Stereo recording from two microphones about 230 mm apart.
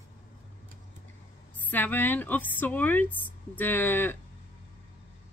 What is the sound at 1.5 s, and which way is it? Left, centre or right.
A woman's voice, centre.